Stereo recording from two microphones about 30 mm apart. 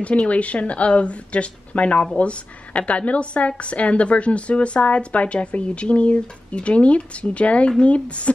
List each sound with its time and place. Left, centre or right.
0.3 s a woman's voice: left